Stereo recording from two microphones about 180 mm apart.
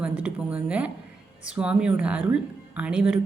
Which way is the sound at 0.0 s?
5° right (ahead or behind).